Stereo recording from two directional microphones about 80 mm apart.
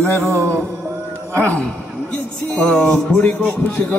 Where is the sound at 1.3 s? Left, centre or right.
Centre.